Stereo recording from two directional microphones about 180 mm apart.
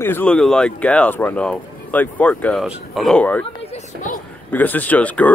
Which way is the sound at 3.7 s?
45° left (ahead or behind).